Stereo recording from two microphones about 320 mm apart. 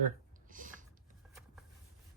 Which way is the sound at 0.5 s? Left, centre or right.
Right.